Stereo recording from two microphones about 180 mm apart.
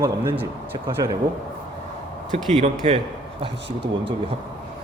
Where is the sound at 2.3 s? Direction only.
35° right (ahead or behind).